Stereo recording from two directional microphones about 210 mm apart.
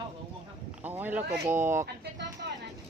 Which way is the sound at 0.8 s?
10° right (ahead or behind).